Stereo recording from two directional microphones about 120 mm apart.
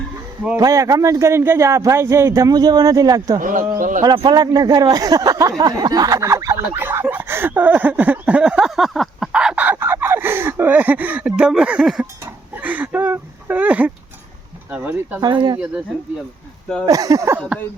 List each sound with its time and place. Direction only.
0.5 s speech: 25° right (ahead or behind)
3.4 s speech: 90° right
4.0 s speech: 35° right (ahead or behind)
6.7 s a sound: 15° right (ahead or behind)
9.7 s a sound: 20° right (ahead or behind)
14.7 s speech: 15° right (ahead or behind)
15.2 s speech: 40° right (ahead or behind)
16.8 s speech: 30° right (ahead or behind)